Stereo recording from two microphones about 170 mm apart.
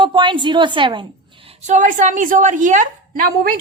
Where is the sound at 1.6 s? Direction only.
45° right (ahead or behind).